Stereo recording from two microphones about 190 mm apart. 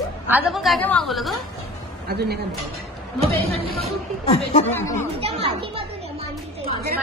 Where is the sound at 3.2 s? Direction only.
30° right (ahead or behind).